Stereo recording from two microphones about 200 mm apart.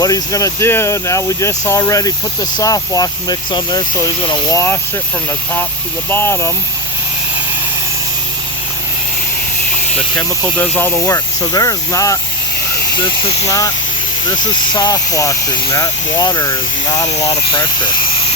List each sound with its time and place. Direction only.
0.0 s speech: 15° left (ahead or behind)
6.1 s speech: 10° left (ahead or behind)
10.6 s speech: 10° left (ahead or behind)
14.8 s speech: 20° left (ahead or behind)